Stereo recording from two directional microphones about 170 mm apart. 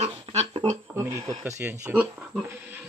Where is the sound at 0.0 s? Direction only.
40° right (ahead or behind).